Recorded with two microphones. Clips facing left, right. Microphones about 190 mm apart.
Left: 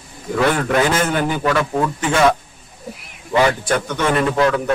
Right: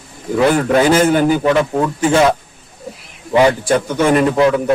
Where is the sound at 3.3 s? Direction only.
25° right (ahead or behind).